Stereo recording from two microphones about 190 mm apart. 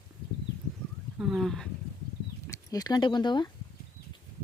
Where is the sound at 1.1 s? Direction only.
5° right (ahead or behind).